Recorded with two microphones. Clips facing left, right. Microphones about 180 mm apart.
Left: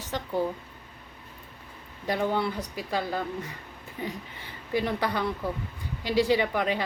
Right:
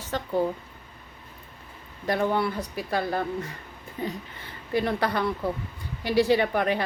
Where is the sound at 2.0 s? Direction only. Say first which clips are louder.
Right 2 dB; 15° left (ahead or behind).